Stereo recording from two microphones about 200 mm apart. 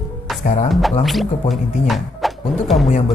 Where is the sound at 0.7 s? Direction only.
Centre (ahead or behind).